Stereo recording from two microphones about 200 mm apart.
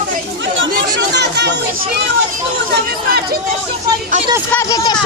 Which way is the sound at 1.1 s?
55° right (ahead or behind).